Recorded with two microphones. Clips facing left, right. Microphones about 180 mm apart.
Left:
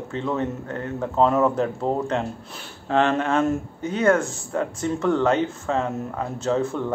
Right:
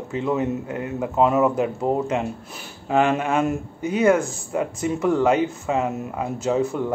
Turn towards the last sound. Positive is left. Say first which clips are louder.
# right 1 dB
turn(degrees=-10)  # may be behind; listen again after turning